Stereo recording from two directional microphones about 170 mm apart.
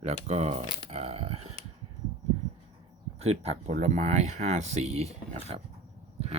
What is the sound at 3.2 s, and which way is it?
Speech, 40° right (ahead or behind).